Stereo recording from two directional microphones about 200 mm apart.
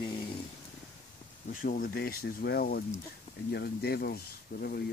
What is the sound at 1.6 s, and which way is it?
Speech, 45° left (ahead or behind).